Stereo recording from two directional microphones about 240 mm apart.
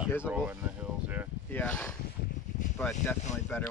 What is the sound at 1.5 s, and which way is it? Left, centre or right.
Speech, centre.